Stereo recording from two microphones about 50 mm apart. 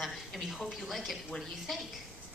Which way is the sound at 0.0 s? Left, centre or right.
Centre.